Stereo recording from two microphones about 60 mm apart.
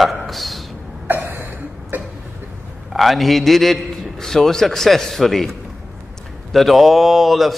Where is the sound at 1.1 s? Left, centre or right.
Right.